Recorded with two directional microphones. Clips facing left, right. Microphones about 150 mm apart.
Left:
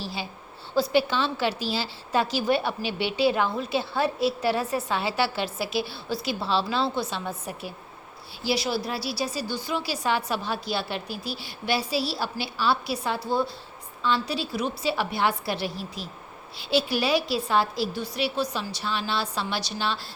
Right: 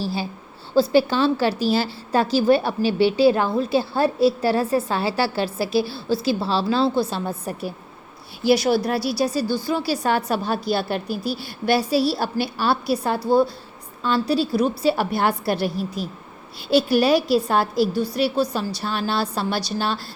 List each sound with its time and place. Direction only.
0.0 s a woman's voice: 40° right (ahead or behind)
2.3 s a woman's voice: 35° right (ahead or behind)
8.4 s a woman's voice: 55° right (ahead or behind)
9.6 s a woman's voice: 40° right (ahead or behind)